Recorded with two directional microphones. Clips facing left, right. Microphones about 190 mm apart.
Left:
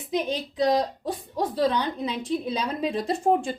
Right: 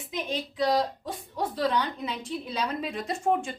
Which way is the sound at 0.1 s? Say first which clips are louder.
Left 5 dB; 40° left (ahead or behind).